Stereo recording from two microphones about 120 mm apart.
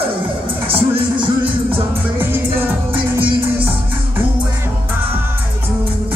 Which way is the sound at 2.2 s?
15° right (ahead or behind).